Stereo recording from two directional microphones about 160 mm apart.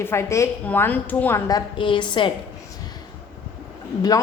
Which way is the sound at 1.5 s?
25° left (ahead or behind).